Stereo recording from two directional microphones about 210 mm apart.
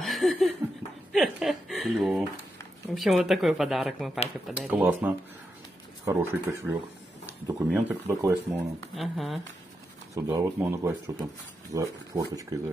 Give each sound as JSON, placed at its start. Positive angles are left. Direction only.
{"t": 0.0, "sound": "laughter", "side_deg": 0}
{"t": 1.1, "sound": "chuckle", "side_deg": 0}
{"t": 2.9, "sound": "speech", "side_deg": 0}
{"t": 8.9, "sound": "speech", "side_deg": 0}
{"t": 10.1, "sound": "speech", "side_deg": -15}